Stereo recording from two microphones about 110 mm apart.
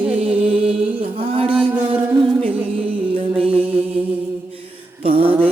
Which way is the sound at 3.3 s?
60° right (ahead or behind).